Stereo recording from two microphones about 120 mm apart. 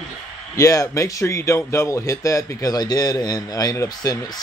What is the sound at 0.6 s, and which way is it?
A man's voice, 25° left (ahead or behind).